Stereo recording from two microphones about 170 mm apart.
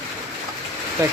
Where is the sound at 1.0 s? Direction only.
15° right (ahead or behind).